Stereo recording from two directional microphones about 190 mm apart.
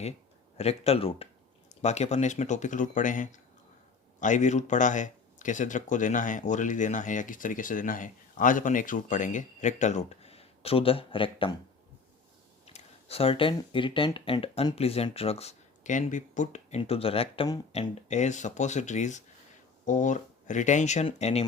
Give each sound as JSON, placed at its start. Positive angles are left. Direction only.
{"t": 0.5, "sound": "speech", "side_deg": 35}
{"t": 12.6, "sound": "speech", "side_deg": 35}